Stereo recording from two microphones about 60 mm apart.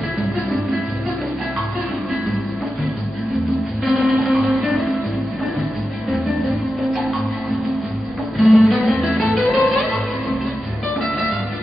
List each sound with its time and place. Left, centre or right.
3.3 s music: centre
6.0 s music: centre
8.4 s music: centre